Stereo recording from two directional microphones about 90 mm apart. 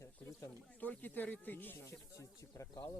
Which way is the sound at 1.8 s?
35° left (ahead or behind).